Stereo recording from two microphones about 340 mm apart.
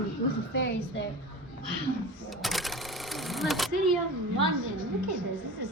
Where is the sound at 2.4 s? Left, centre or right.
Centre.